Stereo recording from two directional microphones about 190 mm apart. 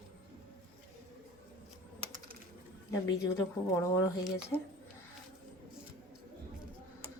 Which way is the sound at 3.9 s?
20° left (ahead or behind).